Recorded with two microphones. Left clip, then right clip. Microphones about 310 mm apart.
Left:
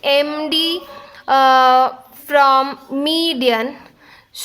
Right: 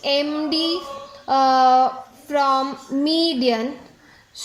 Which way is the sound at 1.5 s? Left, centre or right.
Left.